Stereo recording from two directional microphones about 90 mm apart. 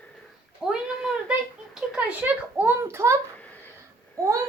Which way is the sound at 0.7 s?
5° right (ahead or behind).